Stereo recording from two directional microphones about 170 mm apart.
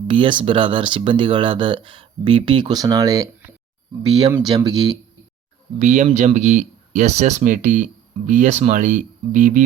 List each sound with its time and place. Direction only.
0.1 s speech: 30° right (ahead or behind)
5.8 s speech: 45° right (ahead or behind)